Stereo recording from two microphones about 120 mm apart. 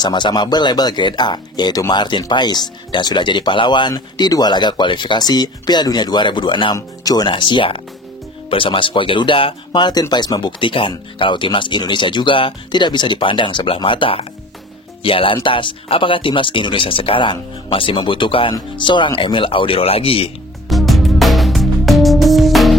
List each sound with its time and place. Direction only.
0.0 s speech: 40° left (ahead or behind)
20.6 s music: centre (ahead or behind)